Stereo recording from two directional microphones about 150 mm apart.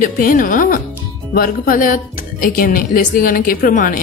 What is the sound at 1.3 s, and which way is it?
Speech, 80° left.